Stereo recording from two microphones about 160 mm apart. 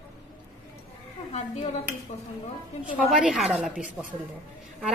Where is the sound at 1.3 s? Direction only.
40° left (ahead or behind).